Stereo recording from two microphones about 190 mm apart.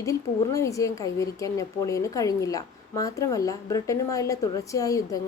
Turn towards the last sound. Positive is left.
turn(degrees=15)  # may be behind; listen again after turning